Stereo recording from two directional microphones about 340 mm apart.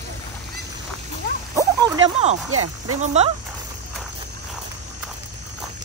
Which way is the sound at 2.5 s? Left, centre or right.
Right.